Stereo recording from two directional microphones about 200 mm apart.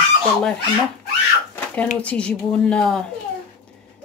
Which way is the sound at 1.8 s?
5° left (ahead or behind).